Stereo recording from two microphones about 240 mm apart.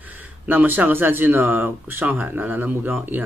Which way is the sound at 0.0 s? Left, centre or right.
Centre.